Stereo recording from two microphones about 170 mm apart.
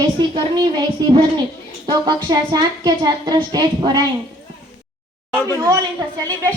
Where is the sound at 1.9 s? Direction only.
25° right (ahead or behind).